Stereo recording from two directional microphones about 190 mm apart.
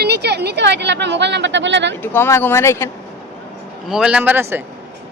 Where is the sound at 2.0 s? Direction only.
10° left (ahead or behind).